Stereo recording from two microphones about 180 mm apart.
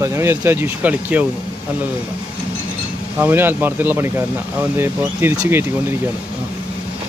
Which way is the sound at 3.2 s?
10° right (ahead or behind).